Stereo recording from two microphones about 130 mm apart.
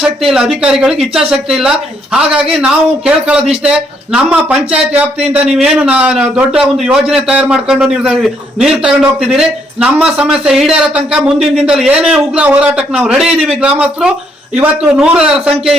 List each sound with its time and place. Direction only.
0.2 s a man's voice: 5° right (ahead or behind)